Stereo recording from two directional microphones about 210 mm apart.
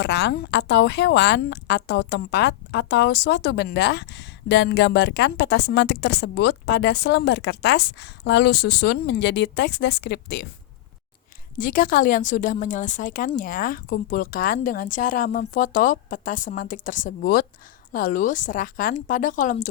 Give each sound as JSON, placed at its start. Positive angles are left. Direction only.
{"t": 0.0, "sound": "speech", "side_deg": 50}
{"t": 11.5, "sound": "a woman's voice", "side_deg": 40}